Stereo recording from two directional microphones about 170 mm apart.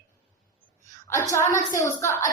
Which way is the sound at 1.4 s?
50° left (ahead or behind).